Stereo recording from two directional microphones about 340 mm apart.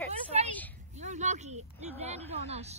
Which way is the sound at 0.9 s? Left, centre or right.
Centre.